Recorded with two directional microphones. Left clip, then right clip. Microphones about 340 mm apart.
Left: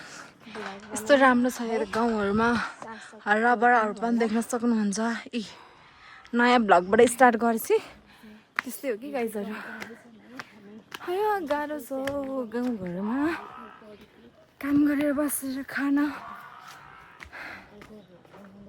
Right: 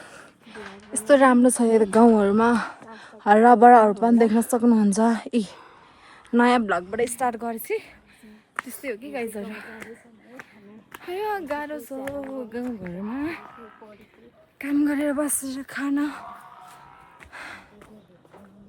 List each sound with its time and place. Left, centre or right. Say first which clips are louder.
0.0 s a sound: left 1 dB; centre
0.9 s a woman's voice: right 3 dB; centre
6.9 s a woman's voice: left 6 dB; left; by 9.9 s centre
10.9 s a woman's voice: left 2 dB; centre
14.6 s a woman's voice: right 1 dB; centre
17.2 s music: right 1 dB; centre